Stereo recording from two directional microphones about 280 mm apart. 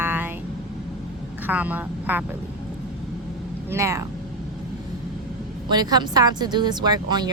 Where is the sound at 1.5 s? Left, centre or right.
Centre.